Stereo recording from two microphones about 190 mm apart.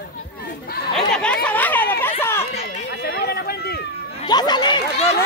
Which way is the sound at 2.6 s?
60° left (ahead or behind).